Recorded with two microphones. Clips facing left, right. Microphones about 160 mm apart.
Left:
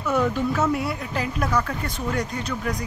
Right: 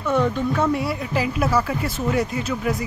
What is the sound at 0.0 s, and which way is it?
Speech, 5° left (ahead or behind).